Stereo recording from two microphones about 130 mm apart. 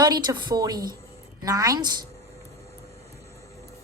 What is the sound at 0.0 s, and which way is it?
A woman's voice, 30° right (ahead or behind).